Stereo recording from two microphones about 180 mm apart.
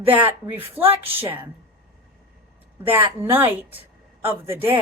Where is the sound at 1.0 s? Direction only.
10° right (ahead or behind).